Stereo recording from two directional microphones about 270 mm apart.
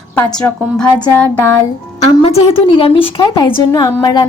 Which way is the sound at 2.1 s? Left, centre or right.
Left.